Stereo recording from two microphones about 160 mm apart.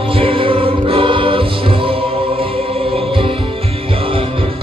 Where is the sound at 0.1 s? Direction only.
35° right (ahead or behind).